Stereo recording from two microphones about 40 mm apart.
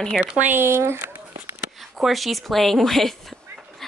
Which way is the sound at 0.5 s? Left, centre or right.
Right.